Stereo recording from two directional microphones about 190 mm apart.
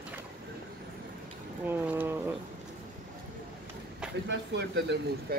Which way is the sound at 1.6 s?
10° right (ahead or behind).